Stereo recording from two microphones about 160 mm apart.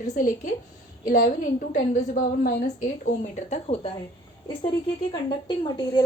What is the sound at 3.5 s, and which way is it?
Speech, 40° left (ahead or behind).